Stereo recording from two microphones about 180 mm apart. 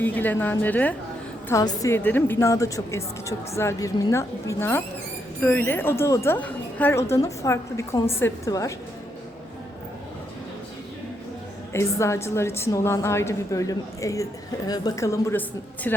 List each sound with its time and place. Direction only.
0.0 s a woman's voice: 10° left (ahead or behind)
11.7 s a woman's voice: 15° left (ahead or behind)